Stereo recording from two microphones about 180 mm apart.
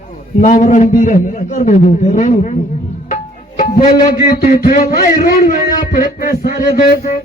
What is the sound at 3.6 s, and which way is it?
Music, 50° left (ahead or behind).